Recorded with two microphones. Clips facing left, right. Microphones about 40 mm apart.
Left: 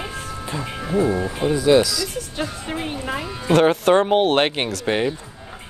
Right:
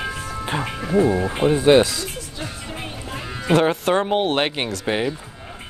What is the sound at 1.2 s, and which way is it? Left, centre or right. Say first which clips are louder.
Speech: right 2 dB; right.